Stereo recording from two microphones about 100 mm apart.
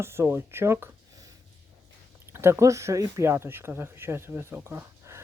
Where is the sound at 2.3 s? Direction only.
25° right (ahead or behind).